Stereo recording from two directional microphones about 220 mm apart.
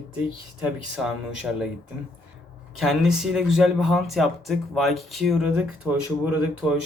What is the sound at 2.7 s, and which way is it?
Speech, centre (ahead or behind).